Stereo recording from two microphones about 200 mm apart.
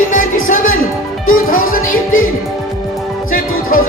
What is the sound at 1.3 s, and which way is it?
Speech, 45° left (ahead or behind).